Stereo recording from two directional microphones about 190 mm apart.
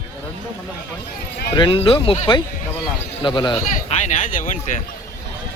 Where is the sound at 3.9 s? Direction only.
40° left (ahead or behind).